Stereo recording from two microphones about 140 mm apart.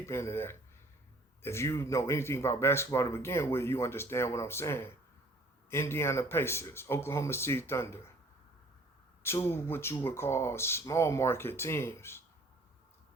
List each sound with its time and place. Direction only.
0.0 s speech: 20° left (ahead or behind)
9.2 s speech: 20° left (ahead or behind)